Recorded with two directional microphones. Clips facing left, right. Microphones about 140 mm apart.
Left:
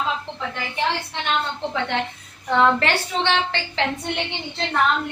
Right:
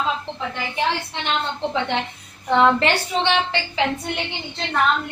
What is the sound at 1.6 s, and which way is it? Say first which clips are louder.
A woman's voice: right 1 dB; 20° right (ahead or behind).